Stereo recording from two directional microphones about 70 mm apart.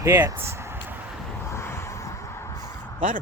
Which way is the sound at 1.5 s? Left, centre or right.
Left.